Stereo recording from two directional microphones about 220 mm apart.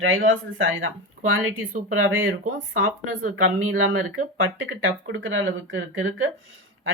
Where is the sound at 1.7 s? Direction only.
40° right (ahead or behind).